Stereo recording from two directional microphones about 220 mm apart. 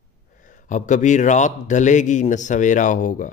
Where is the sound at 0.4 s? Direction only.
35° left (ahead or behind).